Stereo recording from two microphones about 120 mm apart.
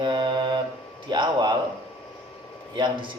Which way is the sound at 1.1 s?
35° right (ahead or behind).